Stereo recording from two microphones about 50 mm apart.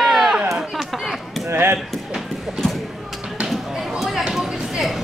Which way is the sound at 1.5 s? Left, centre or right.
Right.